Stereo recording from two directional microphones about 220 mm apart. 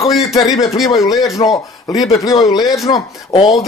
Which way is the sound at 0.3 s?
15° left (ahead or behind).